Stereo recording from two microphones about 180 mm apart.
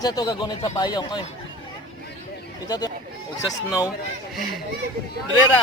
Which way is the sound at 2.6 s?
20° left (ahead or behind).